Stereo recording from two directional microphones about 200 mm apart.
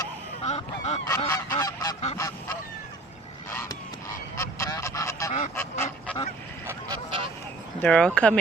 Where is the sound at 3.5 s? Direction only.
15° left (ahead or behind).